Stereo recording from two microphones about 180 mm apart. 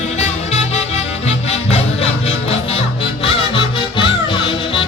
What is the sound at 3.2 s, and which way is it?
Music, 30° left (ahead or behind).